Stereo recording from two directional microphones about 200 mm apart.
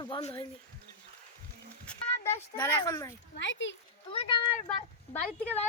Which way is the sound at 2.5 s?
15° left (ahead or behind).